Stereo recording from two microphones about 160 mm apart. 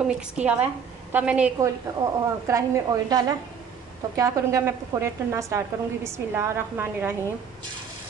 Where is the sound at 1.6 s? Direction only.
20° right (ahead or behind).